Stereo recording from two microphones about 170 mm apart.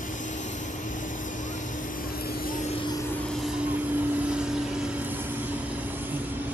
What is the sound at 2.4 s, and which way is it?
Vehicle, 50° left (ahead or behind).